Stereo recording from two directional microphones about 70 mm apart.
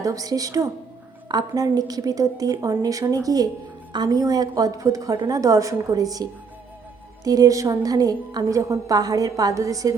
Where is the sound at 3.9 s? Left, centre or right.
Right.